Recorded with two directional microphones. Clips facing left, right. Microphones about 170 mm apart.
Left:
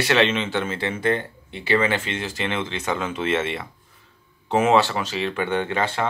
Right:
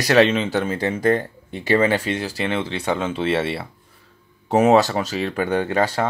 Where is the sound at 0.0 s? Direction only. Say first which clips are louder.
Right 4 dB; 40° right (ahead or behind).